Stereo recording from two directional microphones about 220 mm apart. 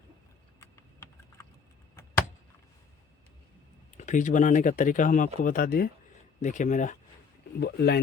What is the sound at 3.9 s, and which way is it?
Speech, 35° left (ahead or behind).